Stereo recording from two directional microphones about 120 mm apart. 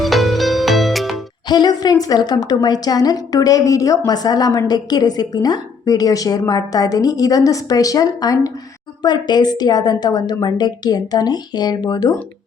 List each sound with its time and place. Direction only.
0.0 s music: centre (ahead or behind)
1.5 s a woman's voice: 35° left (ahead or behind)